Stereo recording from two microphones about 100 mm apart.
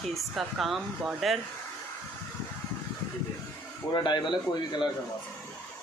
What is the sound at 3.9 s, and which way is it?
Speech, 50° left (ahead or behind).